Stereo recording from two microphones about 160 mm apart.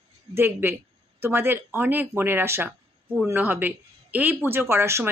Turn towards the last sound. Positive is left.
turn(degrees=-15)  # may be behind; listen again after turning